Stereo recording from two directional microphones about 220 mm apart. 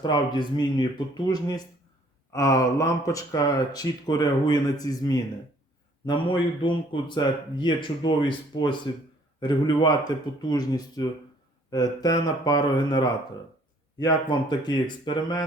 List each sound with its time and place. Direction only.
0.0 s a man's voice: 20° left (ahead or behind)